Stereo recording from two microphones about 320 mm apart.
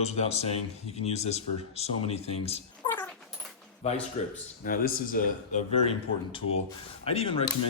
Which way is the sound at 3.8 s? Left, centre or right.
Centre.